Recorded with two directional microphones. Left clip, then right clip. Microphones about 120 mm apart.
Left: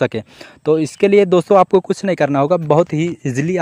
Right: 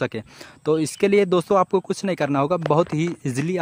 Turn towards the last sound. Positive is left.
turn(degrees=30)  # may be behind; listen again after turning